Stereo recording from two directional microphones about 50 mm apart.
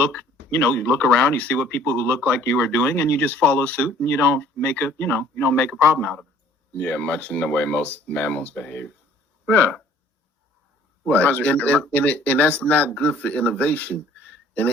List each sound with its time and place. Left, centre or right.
0.7 s speech: left
1.9 s speech: left
2.1 s speech: left
11.1 s speech: left